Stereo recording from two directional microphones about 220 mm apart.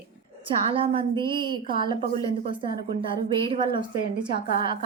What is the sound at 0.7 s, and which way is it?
Speech, 25° right (ahead or behind).